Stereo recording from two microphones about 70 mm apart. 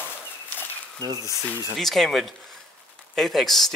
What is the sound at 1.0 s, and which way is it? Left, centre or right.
Speech, right.